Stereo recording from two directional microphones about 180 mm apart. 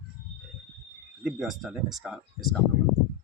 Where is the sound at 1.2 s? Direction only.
Centre (ahead or behind).